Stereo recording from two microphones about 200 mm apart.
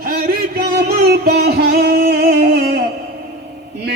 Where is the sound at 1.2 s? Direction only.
55° right (ahead or behind).